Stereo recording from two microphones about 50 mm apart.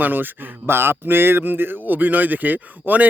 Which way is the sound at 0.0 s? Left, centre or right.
Right.